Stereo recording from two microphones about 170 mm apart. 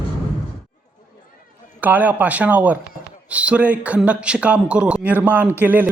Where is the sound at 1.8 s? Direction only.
10° right (ahead or behind).